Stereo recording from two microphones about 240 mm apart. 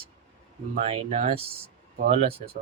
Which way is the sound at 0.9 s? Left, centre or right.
Right.